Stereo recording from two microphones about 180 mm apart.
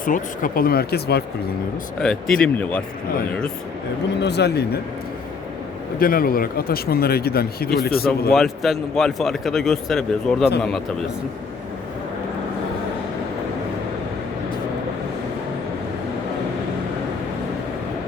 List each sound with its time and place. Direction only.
0.0 s speech: 50° left (ahead or behind)
2.0 s speech: 5° left (ahead or behind)
4.2 s speech: 70° left (ahead or behind)
6.0 s speech: 55° left (ahead or behind)
8.3 s speech: centre (ahead or behind)